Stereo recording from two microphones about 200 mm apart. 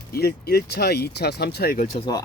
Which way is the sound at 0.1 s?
50° left (ahead or behind).